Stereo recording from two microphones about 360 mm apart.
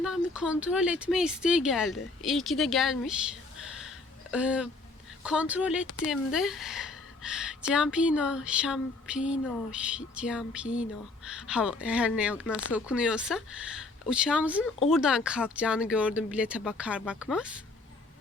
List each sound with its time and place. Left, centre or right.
0.0 s speech: centre
3.8 s a sound: centre
5.2 s a woman's voice: centre
12.5 s speech: left
12.7 s speech: centre